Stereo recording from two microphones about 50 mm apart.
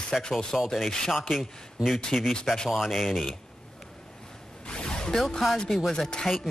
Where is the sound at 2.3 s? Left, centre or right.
Centre.